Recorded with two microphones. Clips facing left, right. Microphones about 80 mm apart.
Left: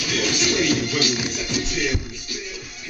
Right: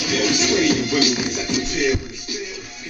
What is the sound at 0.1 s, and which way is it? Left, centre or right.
Music, centre.